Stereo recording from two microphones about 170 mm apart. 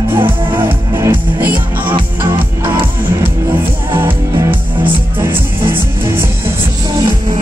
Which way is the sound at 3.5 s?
10° right (ahead or behind).